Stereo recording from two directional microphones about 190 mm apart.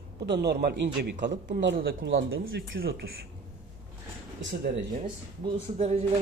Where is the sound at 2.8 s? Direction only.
55° right (ahead or behind).